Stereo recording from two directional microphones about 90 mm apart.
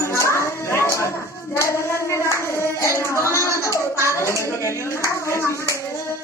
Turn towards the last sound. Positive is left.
turn(degrees=30)  # may be behind; listen again after turning